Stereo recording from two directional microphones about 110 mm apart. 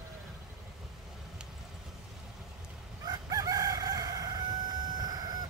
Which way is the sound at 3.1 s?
35° right (ahead or behind).